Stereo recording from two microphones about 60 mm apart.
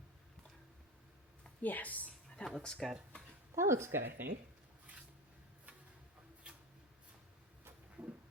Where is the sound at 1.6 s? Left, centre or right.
Left.